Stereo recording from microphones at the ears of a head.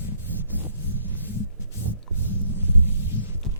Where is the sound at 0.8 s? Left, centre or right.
Left.